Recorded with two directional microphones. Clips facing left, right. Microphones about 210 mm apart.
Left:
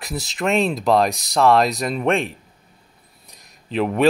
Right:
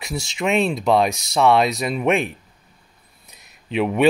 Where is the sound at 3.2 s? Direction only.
Centre (ahead or behind).